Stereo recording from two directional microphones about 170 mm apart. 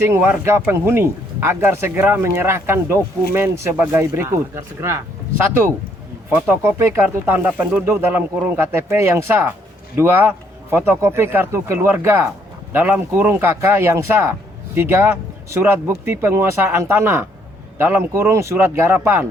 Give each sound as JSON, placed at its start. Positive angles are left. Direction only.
{"t": 0.1, "sound": "speech", "side_deg": -10}
{"t": 6.3, "sound": "speech", "side_deg": -10}